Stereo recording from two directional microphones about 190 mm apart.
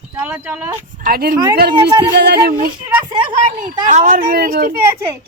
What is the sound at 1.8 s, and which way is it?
Speech, 20° right (ahead or behind).